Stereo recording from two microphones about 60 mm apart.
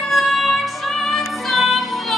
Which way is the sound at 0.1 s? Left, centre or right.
Centre.